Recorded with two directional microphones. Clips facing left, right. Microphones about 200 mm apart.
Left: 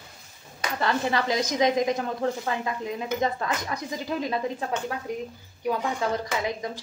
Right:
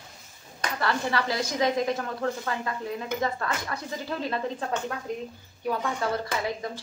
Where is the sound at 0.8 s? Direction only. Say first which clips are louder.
Left 2 dB; 20° left (ahead or behind).